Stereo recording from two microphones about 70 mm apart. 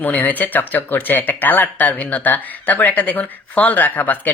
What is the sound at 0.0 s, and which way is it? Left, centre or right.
Speech, left.